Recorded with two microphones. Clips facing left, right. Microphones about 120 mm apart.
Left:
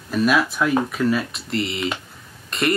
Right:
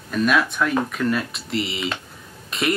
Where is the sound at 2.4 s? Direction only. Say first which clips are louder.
Left 1 dB; centre (ahead or behind).